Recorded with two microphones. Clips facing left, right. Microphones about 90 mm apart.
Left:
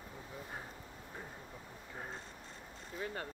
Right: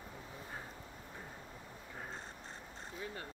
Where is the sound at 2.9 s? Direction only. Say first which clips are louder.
Left 4 dB; 60° left (ahead or behind).